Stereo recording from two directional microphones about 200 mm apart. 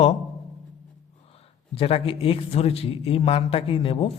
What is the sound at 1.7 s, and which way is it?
A man's voice, 30° left (ahead or behind).